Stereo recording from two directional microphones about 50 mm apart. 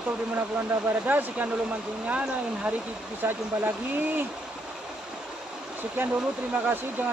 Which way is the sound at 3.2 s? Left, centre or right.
Right.